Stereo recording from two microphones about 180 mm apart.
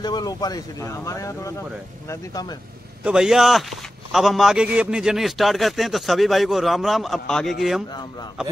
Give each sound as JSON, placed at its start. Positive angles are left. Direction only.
{"t": 0.0, "sound": "speech", "side_deg": 20}
{"t": 3.0, "sound": "a man's voice", "side_deg": -5}